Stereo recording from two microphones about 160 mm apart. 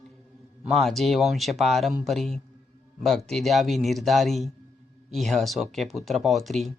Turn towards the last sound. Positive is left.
turn(degrees=0)  # may be behind; listen again after turning